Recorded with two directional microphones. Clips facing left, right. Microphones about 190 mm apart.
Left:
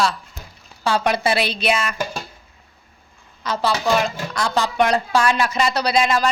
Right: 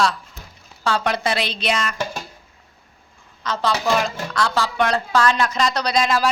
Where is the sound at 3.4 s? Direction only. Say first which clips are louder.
Left 1 dB; 10° left (ahead or behind).